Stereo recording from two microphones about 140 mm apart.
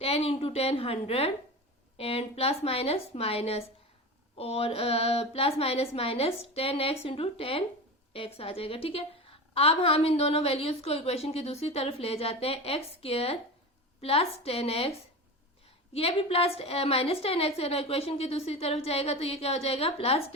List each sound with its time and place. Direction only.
0.0 s a woman's voice: 45° left (ahead or behind)